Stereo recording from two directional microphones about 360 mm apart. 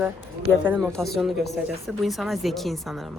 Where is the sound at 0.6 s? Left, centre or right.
Centre.